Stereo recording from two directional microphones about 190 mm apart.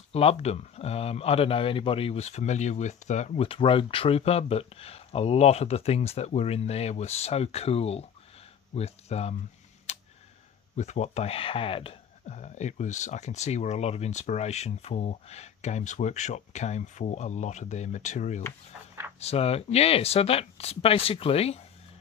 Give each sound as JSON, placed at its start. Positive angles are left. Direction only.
{"t": 0.1, "sound": "speech", "side_deg": 30}
{"t": 9.9, "sound": "a sound", "side_deg": 35}
{"t": 10.8, "sound": "speech", "side_deg": 35}